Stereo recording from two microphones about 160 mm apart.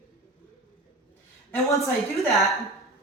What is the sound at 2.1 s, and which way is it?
Speech, centre (ahead or behind).